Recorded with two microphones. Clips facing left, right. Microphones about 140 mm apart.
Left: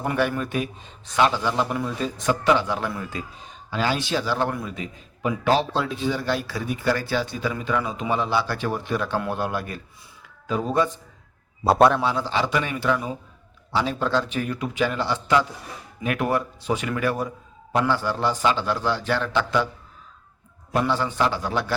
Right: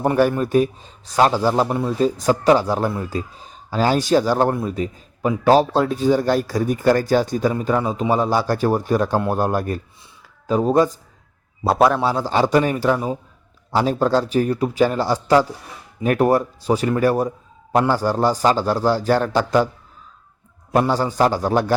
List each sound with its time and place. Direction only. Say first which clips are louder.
0.0 s speech: right 7 dB; 40° right (ahead or behind)
11.6 s a man's voice: right 1 dB; centre (ahead or behind)
11.9 s speech: right 5 dB; 40° right (ahead or behind)
20.7 s speech: right 5 dB; 40° right (ahead or behind)